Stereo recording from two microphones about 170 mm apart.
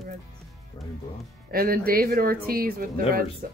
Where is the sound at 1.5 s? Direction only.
60° right (ahead or behind).